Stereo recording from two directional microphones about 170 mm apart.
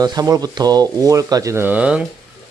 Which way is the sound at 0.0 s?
20° right (ahead or behind).